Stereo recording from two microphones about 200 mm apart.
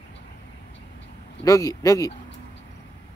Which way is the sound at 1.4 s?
15° left (ahead or behind).